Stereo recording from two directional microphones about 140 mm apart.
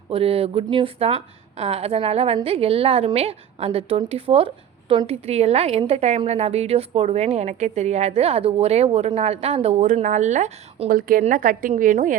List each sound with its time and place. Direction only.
0.1 s a woman's voice: 45° right (ahead or behind)
9.8 s a woman's voice: 60° right (ahead or behind)